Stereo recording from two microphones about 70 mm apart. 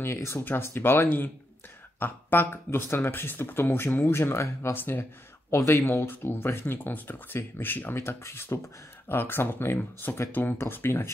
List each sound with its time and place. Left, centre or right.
0.0 s speech: left
4.7 s speech: left
5.5 s speech: left